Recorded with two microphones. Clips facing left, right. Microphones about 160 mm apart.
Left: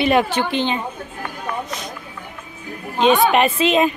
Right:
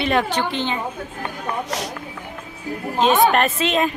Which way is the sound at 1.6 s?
80° right.